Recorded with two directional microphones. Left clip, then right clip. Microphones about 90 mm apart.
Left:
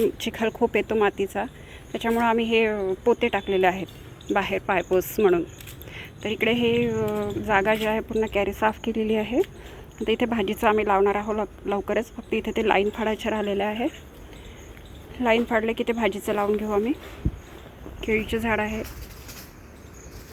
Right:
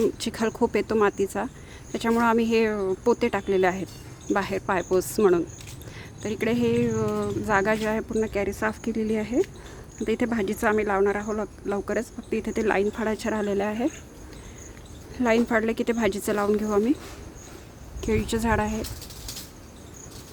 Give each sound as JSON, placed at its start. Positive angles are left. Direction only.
{"t": 0.3, "sound": "a woman's voice", "side_deg": -25}
{"t": 2.7, "sound": "a woman's voice", "side_deg": -20}
{"t": 4.3, "sound": "speech", "side_deg": -10}
{"t": 5.2, "sound": "a woman's voice", "side_deg": -20}
{"t": 6.7, "sound": "a woman's voice", "side_deg": -25}
{"t": 15.2, "sound": "a woman's voice", "side_deg": -35}
{"t": 18.0, "sound": "a woman's voice", "side_deg": -25}